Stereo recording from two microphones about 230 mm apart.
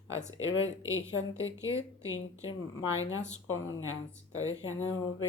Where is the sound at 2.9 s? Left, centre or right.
Left.